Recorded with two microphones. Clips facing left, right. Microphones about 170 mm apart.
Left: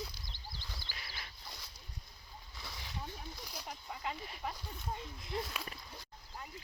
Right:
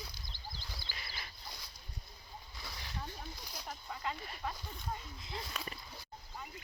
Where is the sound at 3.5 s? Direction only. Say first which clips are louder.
Right 2 dB; 10° left (ahead or behind).